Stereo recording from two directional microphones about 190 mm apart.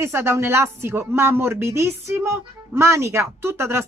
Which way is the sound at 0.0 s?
15° right (ahead or behind).